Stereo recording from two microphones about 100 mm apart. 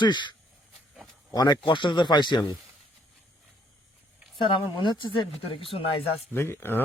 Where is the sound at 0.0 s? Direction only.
50° left (ahead or behind).